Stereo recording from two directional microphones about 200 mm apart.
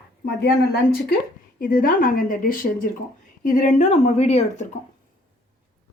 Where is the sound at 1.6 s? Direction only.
45° left (ahead or behind).